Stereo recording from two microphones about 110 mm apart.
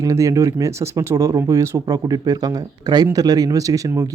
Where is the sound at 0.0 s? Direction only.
30° right (ahead or behind).